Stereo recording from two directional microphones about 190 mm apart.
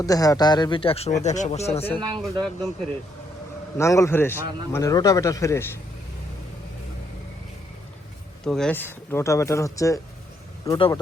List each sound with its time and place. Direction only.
0.0 s speech: 20° left (ahead or behind); by 1.9 s 35° left (ahead or behind)
2.1 s speech: centre (ahead or behind)
3.8 s speech: 15° left (ahead or behind)
8.4 s speech: 5° left (ahead or behind); by 11.0 s 25° left (ahead or behind)